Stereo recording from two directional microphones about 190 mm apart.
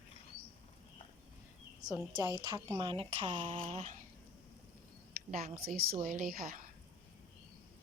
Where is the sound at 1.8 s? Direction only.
20° right (ahead or behind); by 4.0 s 35° right (ahead or behind).